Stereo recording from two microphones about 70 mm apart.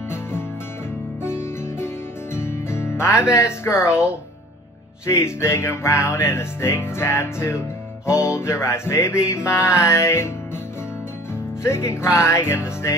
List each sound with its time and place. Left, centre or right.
1.2 s music: left
2.3 s speech: left
5.0 s music: left
11.6 s music: left